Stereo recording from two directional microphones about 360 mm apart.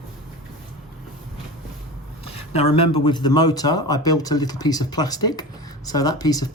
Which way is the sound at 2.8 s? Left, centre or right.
Left.